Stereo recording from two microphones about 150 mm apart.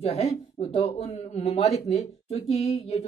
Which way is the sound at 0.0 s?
40° left (ahead or behind).